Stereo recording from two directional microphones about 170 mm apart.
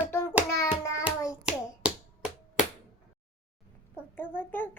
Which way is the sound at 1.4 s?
5° right (ahead or behind).